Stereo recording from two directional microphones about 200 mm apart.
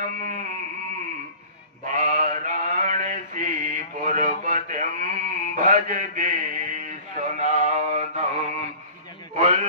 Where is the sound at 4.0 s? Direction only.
40° right (ahead or behind).